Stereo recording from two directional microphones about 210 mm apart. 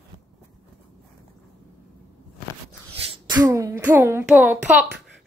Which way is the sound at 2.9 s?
25° right (ahead or behind).